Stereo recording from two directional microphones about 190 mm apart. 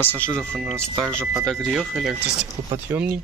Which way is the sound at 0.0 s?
10° left (ahead or behind).